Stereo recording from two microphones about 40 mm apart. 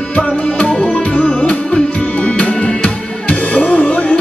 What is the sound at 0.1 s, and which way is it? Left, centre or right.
Music, left.